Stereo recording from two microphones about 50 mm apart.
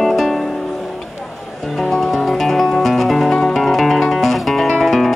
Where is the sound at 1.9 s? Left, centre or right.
Centre.